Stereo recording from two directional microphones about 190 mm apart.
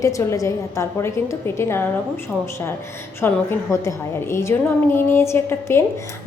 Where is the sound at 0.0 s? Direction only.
15° left (ahead or behind).